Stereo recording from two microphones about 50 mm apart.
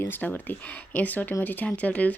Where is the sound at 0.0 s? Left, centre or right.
Left.